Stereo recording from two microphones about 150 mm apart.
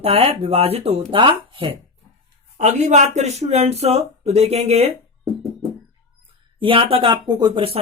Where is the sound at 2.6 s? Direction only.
55° right (ahead or behind).